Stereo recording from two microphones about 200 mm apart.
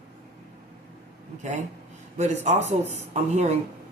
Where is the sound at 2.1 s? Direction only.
35° right (ahead or behind).